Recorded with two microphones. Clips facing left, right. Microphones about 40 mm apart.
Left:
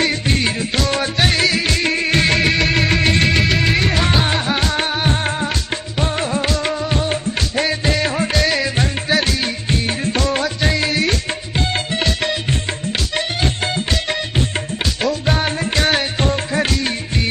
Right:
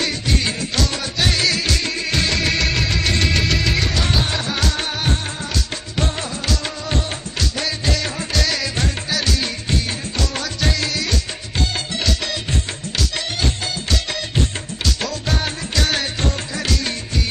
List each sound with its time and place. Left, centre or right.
0.0 s music: left
2.4 s music: left
6.1 s music of bollywood: left
7.1 s music: left
15.0 s music: left